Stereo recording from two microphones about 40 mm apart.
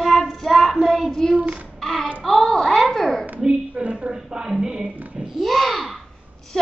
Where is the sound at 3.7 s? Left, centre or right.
Right.